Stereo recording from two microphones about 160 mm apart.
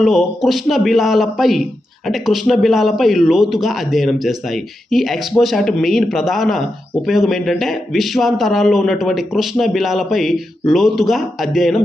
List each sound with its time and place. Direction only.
0.0 s a man's voice: centre (ahead or behind)